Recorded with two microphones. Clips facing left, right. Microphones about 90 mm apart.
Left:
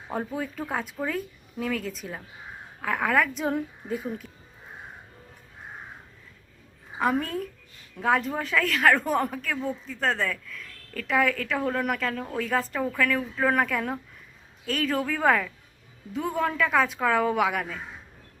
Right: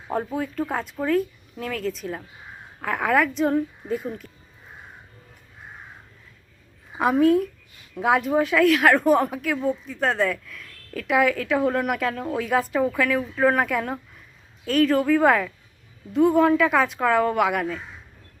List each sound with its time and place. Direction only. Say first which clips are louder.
0.1 s speech: right 4 dB; centre (ahead or behind)
7.0 s speech: right 8 dB; 5° right (ahead or behind)